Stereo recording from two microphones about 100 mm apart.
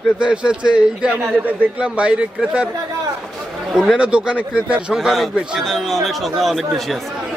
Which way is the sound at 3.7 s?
5° right (ahead or behind).